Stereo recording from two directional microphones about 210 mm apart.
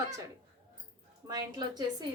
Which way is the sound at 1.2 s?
20° right (ahead or behind).